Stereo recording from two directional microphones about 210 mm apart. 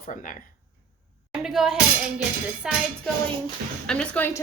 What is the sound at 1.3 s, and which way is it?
Speech, centre (ahead or behind).